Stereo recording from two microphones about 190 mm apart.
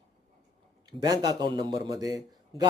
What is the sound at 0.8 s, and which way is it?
A man's voice, 20° right (ahead or behind).